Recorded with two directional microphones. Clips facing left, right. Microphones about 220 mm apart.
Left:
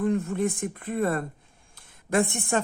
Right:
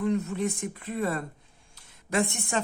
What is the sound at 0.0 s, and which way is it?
Speech, 50° left (ahead or behind).